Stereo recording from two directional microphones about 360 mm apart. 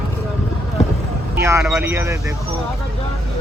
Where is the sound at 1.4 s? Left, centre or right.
Centre.